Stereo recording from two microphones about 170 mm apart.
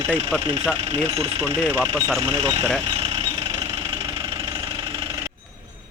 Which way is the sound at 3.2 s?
30° right (ahead or behind).